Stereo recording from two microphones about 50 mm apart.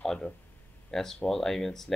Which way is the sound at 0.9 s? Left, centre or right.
Centre.